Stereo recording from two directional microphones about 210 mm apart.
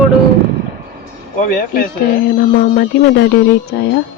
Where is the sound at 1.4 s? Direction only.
45° left (ahead or behind).